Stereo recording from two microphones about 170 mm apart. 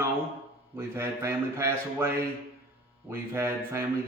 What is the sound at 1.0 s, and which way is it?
A man's voice, 15° right (ahead or behind).